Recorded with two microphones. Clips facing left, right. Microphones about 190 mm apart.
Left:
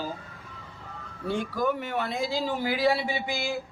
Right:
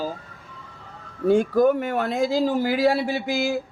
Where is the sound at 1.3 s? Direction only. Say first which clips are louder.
Right 10 dB; 45° right (ahead or behind).